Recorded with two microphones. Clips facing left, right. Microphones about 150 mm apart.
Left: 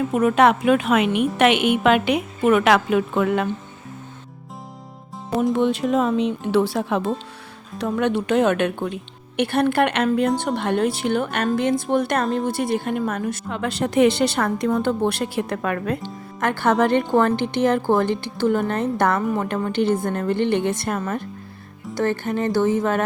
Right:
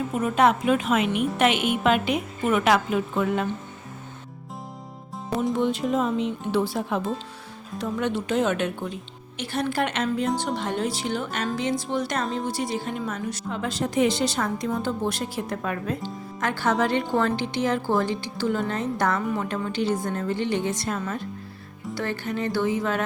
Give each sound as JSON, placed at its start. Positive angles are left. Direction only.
{"t": 0.2, "sound": "a woman's voice", "side_deg": 70}
{"t": 5.5, "sound": "a woman's voice", "side_deg": 70}
{"t": 7.8, "sound": "speech", "side_deg": 65}